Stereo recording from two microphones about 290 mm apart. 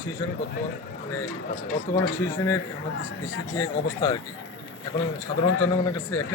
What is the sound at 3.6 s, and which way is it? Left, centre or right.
Speech, centre.